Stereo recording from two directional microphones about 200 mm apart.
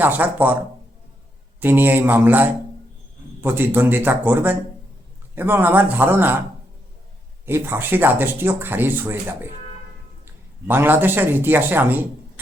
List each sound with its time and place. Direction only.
0.0 s speech: 10° right (ahead or behind)
1.6 s speech: 10° right (ahead or behind)
7.4 s speech: 10° right (ahead or behind)
10.7 s speech: 10° right (ahead or behind)